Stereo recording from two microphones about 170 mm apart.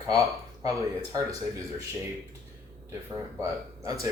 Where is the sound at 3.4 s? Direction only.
20° right (ahead or behind).